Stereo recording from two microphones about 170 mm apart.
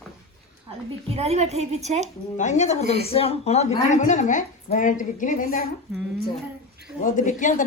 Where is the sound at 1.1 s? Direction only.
35° right (ahead or behind).